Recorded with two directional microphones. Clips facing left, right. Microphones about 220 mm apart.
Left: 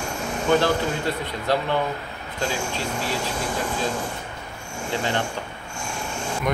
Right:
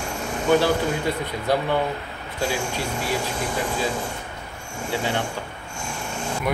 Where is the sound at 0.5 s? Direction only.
10° right (ahead or behind).